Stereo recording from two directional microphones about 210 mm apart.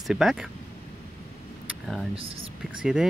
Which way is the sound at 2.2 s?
25° right (ahead or behind).